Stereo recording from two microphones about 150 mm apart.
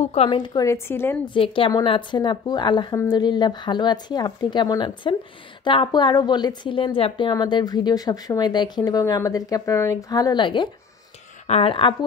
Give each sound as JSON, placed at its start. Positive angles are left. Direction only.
{"t": 0.0, "sound": "a woman's voice", "side_deg": 45}
{"t": 1.2, "sound": "a woman's voice", "side_deg": 35}